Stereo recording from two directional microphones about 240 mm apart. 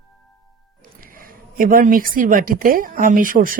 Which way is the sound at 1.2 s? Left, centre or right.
Right.